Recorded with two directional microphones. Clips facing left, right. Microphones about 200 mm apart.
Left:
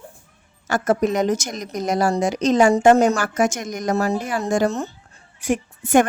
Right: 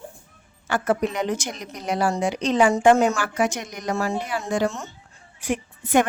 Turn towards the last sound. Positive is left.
turn(degrees=45)  # may be behind; listen again after turning